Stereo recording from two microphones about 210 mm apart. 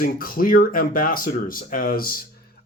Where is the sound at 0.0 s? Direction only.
45° left (ahead or behind).